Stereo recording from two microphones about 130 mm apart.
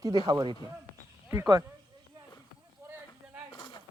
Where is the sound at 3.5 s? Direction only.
40° left (ahead or behind).